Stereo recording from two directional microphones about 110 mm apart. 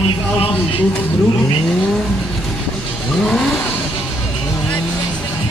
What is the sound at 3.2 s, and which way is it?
Vehicle, centre (ahead or behind).